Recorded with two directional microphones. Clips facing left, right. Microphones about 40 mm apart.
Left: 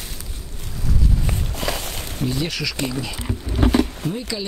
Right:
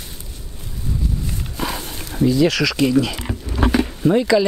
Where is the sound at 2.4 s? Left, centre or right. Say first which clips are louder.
Right 8 dB; right.